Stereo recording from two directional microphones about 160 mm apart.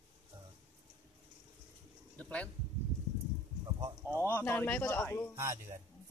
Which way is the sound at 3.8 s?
20° right (ahead or behind).